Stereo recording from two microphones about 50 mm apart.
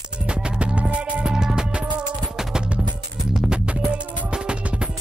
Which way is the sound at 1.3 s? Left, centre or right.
Centre.